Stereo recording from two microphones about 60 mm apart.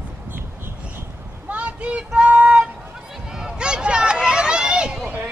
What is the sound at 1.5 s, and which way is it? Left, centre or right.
Child singing, right.